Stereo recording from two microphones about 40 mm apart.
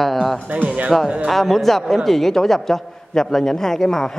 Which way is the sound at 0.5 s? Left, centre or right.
Right.